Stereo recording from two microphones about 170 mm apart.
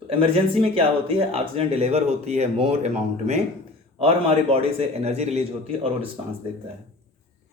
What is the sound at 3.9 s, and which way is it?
Speech, 35° right (ahead or behind).